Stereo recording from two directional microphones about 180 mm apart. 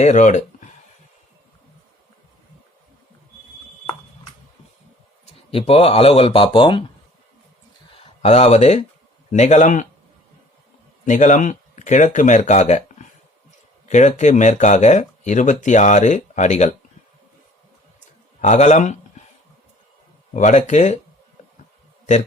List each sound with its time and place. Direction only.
0.0 s speech: 40° left (ahead or behind)
5.5 s speech: 30° left (ahead or behind)
7.9 s speech: 35° left (ahead or behind)
11.0 s speech: 40° left (ahead or behind)
18.3 s speech: 40° left (ahead or behind)
20.3 s speech: 40° left (ahead or behind)